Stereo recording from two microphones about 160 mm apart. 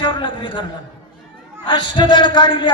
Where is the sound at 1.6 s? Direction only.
30° left (ahead or behind).